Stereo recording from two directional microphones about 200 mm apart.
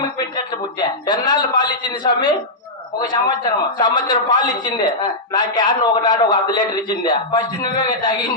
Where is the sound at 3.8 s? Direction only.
20° left (ahead or behind).